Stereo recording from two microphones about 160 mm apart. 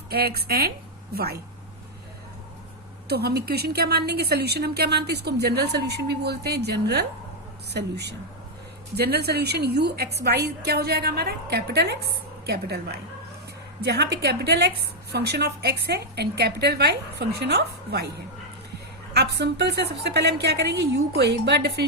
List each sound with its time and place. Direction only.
0.1 s a woman's voice: 80° right
3.1 s a woman's voice: 85° right
19.1 s a woman's voice: 90° right